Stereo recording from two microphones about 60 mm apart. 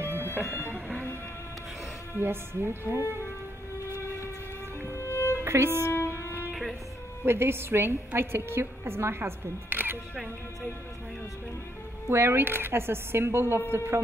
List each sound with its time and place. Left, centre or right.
0.0 s music: right
0.3 s music: left
2.1 s a woman's voice: right
4.8 s music: left
5.4 s speech: right
5.9 s music: left
7.2 s a woman's voice: right
12.1 s a woman's voice: right